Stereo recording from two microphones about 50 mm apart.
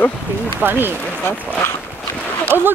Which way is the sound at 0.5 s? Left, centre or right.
Right.